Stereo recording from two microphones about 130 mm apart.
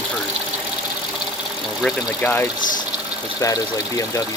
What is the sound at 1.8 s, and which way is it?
Speech, 15° left (ahead or behind).